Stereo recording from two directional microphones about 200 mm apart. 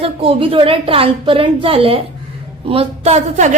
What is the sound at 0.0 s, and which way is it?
A woman's voice, 30° right (ahead or behind).